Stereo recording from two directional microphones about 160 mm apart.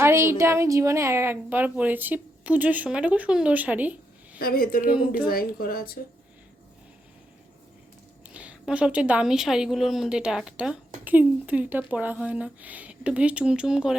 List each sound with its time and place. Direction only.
0.0 s a woman's voice: 15° right (ahead or behind)
4.4 s speech: 65° left (ahead or behind)
8.3 s a woman's voice: 10° right (ahead or behind)